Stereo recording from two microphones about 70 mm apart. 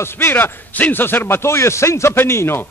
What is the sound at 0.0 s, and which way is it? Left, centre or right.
A man's voice, left.